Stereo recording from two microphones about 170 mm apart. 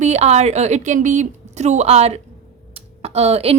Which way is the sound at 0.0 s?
40° right (ahead or behind).